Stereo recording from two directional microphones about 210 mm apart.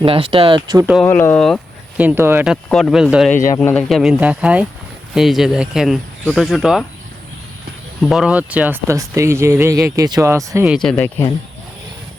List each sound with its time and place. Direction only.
0.0 s speech: 25° right (ahead or behind)
1.0 s speech: 10° left (ahead or behind)
2.0 s speech: 10° right (ahead or behind)
2.6 s speech: 5° left (ahead or behind)
8.0 s speech: centre (ahead or behind)
10.8 s speech: 5° left (ahead or behind)